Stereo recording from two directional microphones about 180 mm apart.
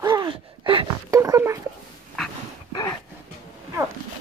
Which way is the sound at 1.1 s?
20° right (ahead or behind).